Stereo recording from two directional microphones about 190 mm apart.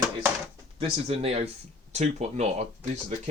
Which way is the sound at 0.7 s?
30° right (ahead or behind).